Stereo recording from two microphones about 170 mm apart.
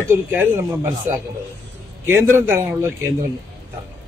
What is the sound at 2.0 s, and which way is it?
Speech, 15° right (ahead or behind).